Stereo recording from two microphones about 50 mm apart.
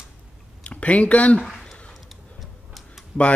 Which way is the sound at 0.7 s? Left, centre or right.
Left.